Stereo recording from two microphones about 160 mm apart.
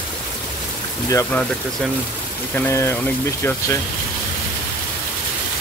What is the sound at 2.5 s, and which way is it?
Speech, 15° left (ahead or behind).